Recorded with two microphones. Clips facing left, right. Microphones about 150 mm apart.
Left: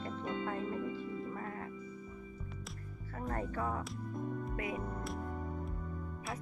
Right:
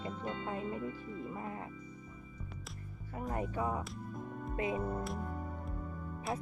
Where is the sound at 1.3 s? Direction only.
15° right (ahead or behind).